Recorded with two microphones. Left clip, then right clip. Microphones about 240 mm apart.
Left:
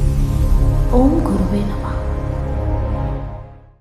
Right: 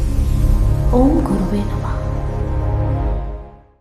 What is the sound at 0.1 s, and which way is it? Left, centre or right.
Music, centre.